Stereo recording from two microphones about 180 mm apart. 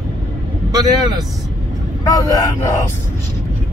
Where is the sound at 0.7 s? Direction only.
20° right (ahead or behind).